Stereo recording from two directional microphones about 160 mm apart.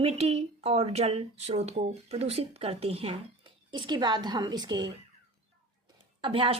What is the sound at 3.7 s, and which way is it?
A woman's voice, 25° right (ahead or behind).